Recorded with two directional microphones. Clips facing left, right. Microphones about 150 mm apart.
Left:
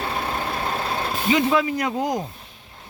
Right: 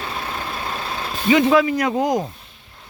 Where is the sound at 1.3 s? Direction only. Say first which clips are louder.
Right 5 dB; 75° right (ahead or behind); by 2.2 s 90° right.